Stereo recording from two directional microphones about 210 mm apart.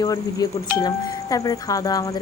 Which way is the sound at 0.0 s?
15° left (ahead or behind).